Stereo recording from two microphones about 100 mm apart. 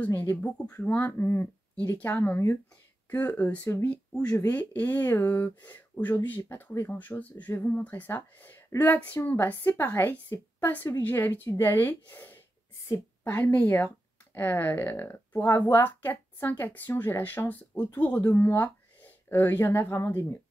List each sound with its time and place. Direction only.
0.0 s speech: 20° left (ahead or behind)
10.3 s a woman's voice: 30° left (ahead or behind)
10.9 s speech: 20° left (ahead or behind)